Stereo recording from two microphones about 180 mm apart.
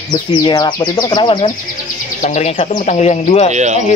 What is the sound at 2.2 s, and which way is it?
Speech, 40° left (ahead or behind).